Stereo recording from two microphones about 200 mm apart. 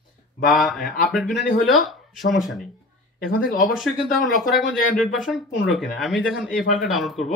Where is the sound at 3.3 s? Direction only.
45° left (ahead or behind).